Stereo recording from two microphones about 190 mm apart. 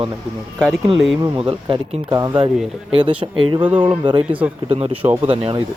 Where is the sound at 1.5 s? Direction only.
25° right (ahead or behind).